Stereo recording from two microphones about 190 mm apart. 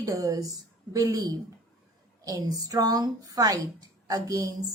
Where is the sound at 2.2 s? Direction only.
20° right (ahead or behind).